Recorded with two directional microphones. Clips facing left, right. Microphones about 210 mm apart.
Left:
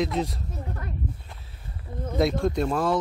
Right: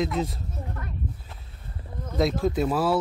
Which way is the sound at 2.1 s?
Centre (ahead or behind).